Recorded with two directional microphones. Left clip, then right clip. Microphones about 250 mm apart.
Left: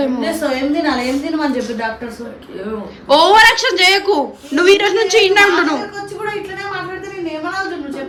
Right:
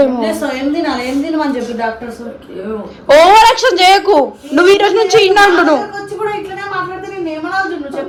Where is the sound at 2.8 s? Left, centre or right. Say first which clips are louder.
Right 5 dB; centre.